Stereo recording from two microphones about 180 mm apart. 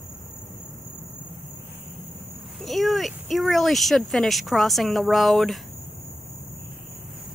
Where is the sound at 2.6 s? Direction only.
Centre (ahead or behind).